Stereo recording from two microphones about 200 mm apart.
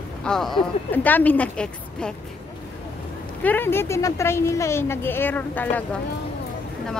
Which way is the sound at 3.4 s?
10° left (ahead or behind).